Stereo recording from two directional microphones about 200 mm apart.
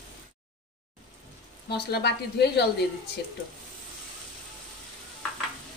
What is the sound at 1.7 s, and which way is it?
Speech, 55° left (ahead or behind).